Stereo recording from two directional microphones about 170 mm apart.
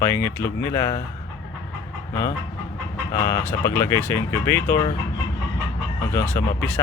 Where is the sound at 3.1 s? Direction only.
20° left (ahead or behind).